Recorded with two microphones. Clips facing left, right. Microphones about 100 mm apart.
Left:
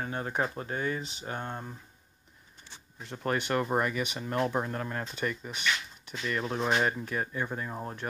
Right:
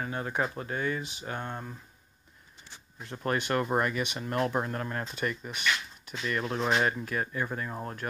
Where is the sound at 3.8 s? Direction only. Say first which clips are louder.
Right 1 dB; 40° right (ahead or behind).